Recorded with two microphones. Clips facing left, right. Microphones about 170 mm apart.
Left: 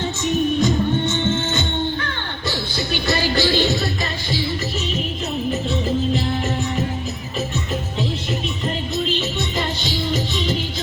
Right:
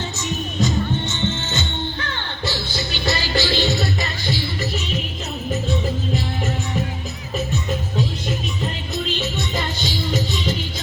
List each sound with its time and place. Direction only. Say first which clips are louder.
0.6 s music: left 3 dB; 55° left (ahead or behind)